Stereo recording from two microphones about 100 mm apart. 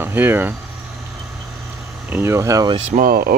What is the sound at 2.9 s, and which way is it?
Speech, 90° right.